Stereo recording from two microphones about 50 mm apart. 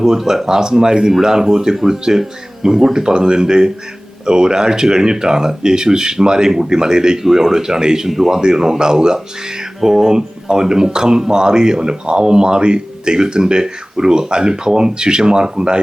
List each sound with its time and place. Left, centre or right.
0.0 s speech: centre